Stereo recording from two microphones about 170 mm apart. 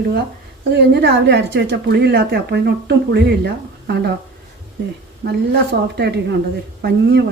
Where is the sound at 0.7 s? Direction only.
80° right.